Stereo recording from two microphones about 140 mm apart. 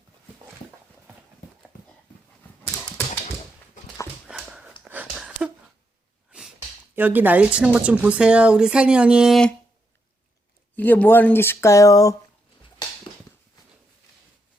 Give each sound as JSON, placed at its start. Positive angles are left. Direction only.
{"t": 4.3, "sound": "dog", "side_deg": -5}
{"t": 4.8, "sound": "a sound", "side_deg": -10}
{"t": 6.9, "sound": "speech", "side_deg": -15}
{"t": 10.8, "sound": "speech", "side_deg": 10}